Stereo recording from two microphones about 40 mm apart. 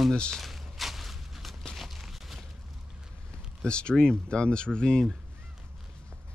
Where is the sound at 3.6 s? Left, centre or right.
Left.